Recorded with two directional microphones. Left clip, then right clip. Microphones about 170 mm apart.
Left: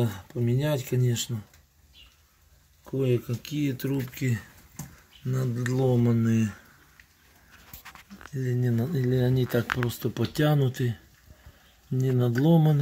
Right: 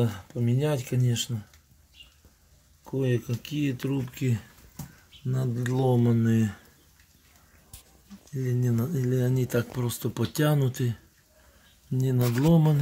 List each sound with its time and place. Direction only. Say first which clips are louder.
0.0 s speech: even; 10° right (ahead or behind)
2.8 s speech: left 2 dB; 10° right (ahead or behind)
8.4 s speech: even; 5° right (ahead or behind)
12.0 s speech: left 1 dB; 5° right (ahead or behind)